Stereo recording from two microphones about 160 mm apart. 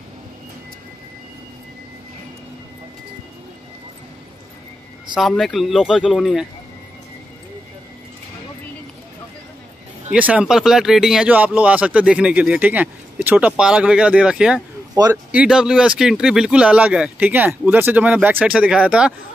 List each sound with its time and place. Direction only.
5.1 s speech: centre (ahead or behind)
10.1 s speech: 10° right (ahead or behind)
15.0 s speech: 25° right (ahead or behind)
15.3 s speech: 5° right (ahead or behind)